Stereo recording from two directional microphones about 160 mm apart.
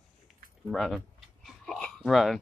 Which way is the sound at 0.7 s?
Centre (ahead or behind).